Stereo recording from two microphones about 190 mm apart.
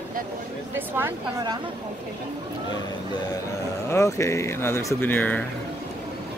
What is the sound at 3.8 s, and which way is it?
Speech, 15° left (ahead or behind).